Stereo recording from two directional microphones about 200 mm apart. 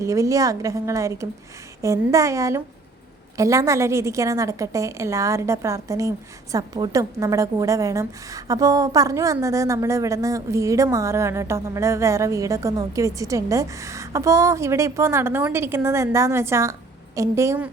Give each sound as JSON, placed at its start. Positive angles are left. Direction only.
{"t": 0.0, "sound": "a woman's voice", "side_deg": -15}